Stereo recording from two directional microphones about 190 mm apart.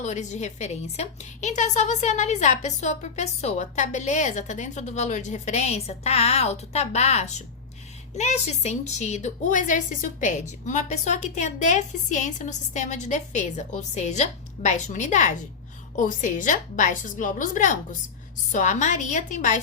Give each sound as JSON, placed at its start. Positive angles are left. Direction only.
{"t": 0.0, "sound": "a woman's voice", "side_deg": 40}